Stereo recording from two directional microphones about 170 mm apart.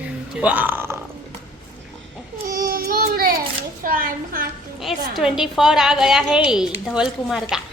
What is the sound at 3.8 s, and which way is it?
Speech, 55° right (ahead or behind).